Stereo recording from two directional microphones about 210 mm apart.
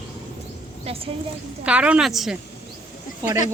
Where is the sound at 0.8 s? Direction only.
25° right (ahead or behind).